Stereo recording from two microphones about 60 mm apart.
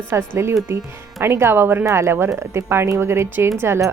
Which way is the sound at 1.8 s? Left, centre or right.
Right.